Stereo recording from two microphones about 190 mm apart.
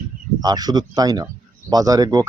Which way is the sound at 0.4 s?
20° right (ahead or behind).